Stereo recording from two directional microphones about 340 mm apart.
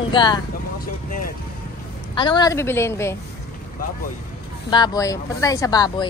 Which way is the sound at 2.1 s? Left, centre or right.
Centre.